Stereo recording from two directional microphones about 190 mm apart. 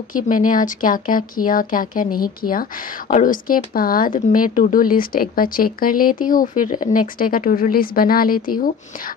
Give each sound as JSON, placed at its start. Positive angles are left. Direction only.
{"t": 0.1, "sound": "speech", "side_deg": 45}